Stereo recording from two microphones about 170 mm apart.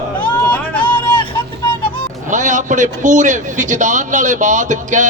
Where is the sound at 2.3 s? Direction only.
45° right (ahead or behind).